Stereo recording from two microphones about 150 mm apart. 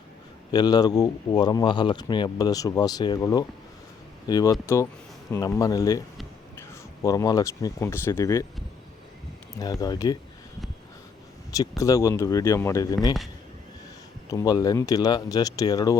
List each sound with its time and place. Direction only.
0.5 s speech: 25° left (ahead or behind)
9.6 s speech: 25° left (ahead or behind)
11.8 s speech: 20° left (ahead or behind)
14.3 s speech: 25° left (ahead or behind)